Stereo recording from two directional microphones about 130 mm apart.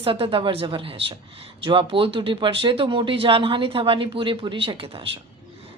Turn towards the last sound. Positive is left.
turn(degrees=-45)  # may be behind; listen again after turning